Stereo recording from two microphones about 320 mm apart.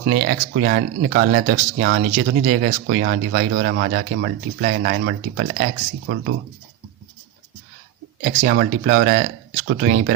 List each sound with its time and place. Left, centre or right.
0.1 s speech: right
8.2 s speech: right